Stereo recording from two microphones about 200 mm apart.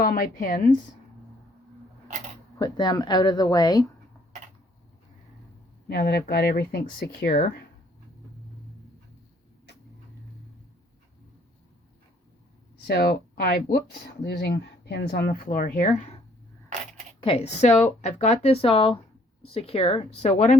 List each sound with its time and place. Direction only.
0.0 s speech: 45° left (ahead or behind)
2.6 s speech: 20° left (ahead or behind)
5.9 s speech: 55° left (ahead or behind)
12.9 s speech: 55° left (ahead or behind)
15.3 s speech: 40° left (ahead or behind)
17.2 s speech: 30° left (ahead or behind)